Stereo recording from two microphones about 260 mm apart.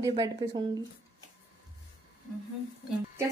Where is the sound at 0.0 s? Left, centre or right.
Centre.